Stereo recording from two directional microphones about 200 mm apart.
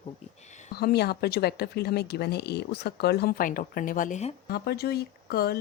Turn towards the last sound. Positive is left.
turn(degrees=50)  # may be behind; listen again after turning